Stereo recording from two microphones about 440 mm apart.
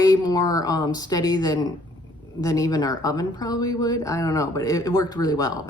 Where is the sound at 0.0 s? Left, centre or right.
Centre.